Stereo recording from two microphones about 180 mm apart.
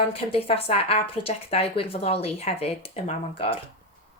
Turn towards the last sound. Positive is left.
turn(degrees=35)  # may be behind; listen again after turning